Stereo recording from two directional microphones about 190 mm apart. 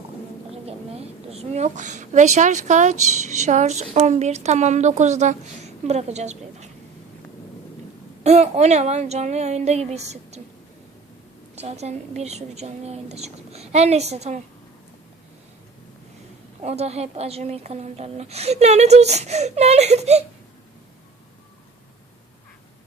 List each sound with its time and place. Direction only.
0.5 s a child's voice: 30° right (ahead or behind)
8.2 s a woman's voice: 35° right (ahead or behind)
11.5 s a woman's voice: 35° right (ahead or behind)
16.6 s a woman's voice: 35° right (ahead or behind)